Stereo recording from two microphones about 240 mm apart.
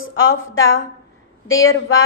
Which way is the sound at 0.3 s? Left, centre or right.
Left.